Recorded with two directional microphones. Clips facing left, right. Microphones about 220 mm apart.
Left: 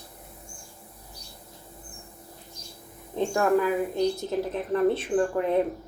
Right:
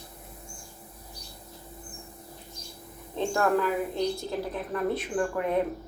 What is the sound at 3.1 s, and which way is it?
A woman's voice, 15° left (ahead or behind).